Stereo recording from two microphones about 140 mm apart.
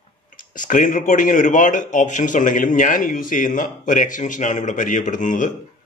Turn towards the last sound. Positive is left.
turn(degrees=70)  # may be behind; listen again after turning